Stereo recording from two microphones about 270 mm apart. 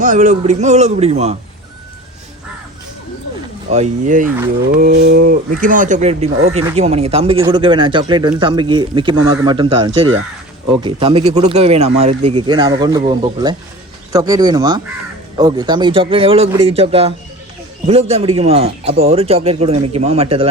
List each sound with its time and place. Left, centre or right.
0.0 s speech: right
3.7 s speech: right